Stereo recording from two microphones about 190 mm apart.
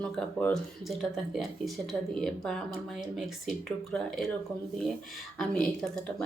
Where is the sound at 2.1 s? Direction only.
Centre (ahead or behind).